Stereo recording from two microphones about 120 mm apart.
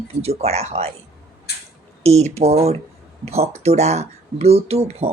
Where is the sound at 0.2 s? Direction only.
60° right (ahead or behind).